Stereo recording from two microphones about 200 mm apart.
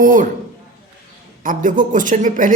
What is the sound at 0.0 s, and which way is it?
Speech, 45° right (ahead or behind).